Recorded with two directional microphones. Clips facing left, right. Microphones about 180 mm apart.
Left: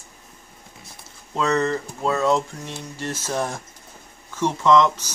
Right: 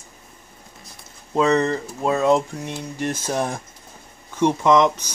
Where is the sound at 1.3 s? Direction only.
20° right (ahead or behind).